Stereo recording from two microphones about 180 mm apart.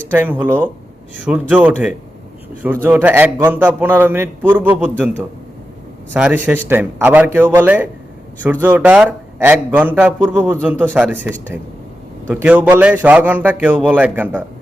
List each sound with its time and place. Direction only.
0.1 s speech: 10° right (ahead or behind)
6.1 s speech: 10° right (ahead or behind)